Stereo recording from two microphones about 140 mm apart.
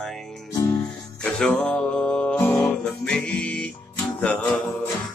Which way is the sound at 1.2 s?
10° left (ahead or behind).